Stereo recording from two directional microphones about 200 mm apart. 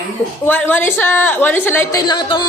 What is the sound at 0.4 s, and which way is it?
A woman's voice, 10° left (ahead or behind).